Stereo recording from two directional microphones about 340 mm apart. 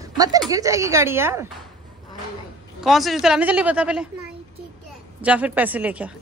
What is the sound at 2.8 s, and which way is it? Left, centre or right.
A woman's voice, centre.